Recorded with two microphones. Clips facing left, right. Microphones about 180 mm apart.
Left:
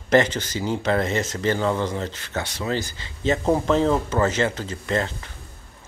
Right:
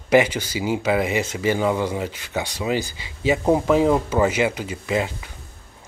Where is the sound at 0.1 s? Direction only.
10° right (ahead or behind).